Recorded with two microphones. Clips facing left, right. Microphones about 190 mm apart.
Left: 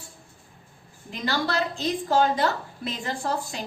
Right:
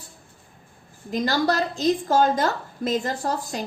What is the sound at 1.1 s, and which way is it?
A woman's voice, 40° right (ahead or behind).